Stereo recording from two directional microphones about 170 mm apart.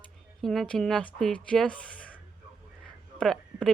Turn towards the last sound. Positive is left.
turn(degrees=5)  # may be behind; listen again after turning